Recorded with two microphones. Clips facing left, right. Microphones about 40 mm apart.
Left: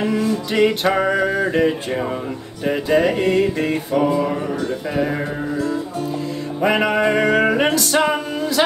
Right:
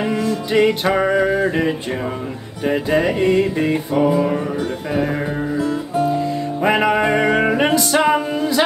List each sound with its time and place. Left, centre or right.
0.2 s music: centre
5.6 s music: centre
6.6 s music: centre